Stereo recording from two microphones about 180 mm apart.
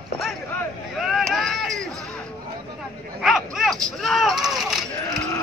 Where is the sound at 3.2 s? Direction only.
Centre (ahead or behind).